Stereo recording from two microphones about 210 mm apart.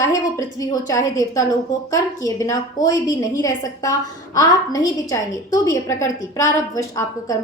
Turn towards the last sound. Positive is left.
turn(degrees=15)  # may be behind; listen again after turning